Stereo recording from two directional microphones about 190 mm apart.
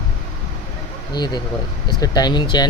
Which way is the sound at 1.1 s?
20° left (ahead or behind).